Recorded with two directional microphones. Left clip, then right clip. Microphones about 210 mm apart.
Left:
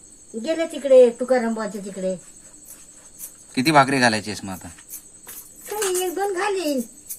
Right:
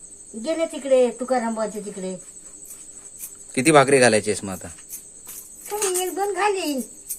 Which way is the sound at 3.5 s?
35° right (ahead or behind).